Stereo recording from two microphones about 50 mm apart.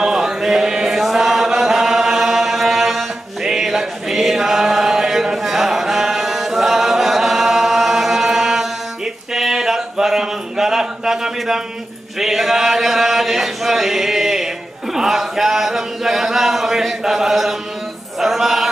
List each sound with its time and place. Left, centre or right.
0.0 s chant: centre
9.3 s a sound: centre
12.2 s chant: centre
18.2 s music: centre